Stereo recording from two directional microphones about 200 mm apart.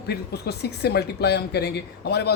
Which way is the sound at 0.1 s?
55° left (ahead or behind).